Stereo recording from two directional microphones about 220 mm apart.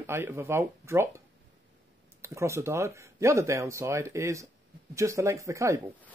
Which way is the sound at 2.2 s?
10° right (ahead or behind).